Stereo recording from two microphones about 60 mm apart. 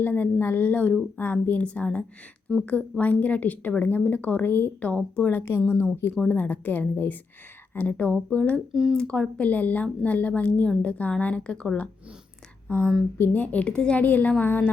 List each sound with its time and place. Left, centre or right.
0.0 s a woman's voice: left
2.5 s a woman's voice: centre
3.0 s speech: left
5.3 s a woman's voice: left; by 9.2 s centre
9.4 s speech: left
12.6 s a woman's voice: left
13.4 s speech: left